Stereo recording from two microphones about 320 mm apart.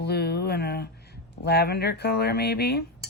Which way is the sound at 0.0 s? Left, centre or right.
Left.